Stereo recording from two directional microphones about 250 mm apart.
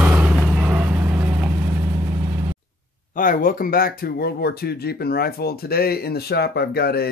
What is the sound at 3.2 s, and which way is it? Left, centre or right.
Speech, left.